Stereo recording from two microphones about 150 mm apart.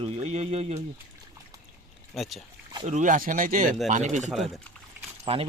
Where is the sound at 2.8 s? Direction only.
55° right (ahead or behind).